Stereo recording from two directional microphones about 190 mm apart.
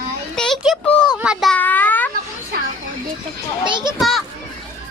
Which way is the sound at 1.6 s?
10° left (ahead or behind).